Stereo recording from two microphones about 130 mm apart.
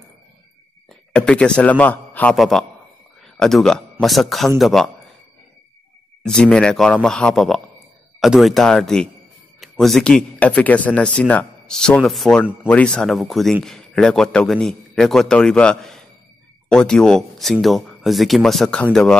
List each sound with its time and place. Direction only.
1.1 s a man's voice: 10° left (ahead or behind)
2.3 s a man's voice: centre (ahead or behind)
3.2 s a sound: centre (ahead or behind)
4.0 s a man's voice: centre (ahead or behind)
6.2 s a man's voice: 5° left (ahead or behind)